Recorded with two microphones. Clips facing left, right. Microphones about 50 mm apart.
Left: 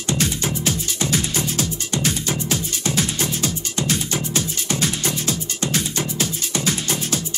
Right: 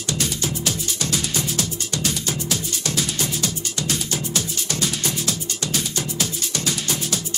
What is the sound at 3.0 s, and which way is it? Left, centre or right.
Music, left.